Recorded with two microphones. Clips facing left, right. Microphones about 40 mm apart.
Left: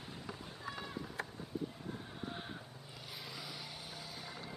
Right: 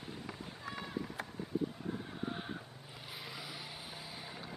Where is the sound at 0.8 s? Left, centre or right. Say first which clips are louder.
Right 3 dB; centre.